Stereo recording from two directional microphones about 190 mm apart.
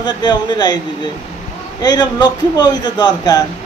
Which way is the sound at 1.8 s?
20° left (ahead or behind).